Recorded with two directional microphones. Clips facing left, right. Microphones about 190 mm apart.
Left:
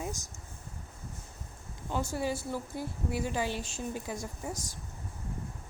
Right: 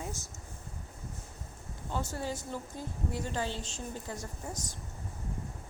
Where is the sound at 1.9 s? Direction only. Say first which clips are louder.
Left 4 dB; 10° left (ahead or behind).